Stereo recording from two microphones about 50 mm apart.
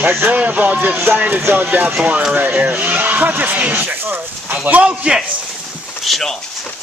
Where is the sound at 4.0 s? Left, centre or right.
Right.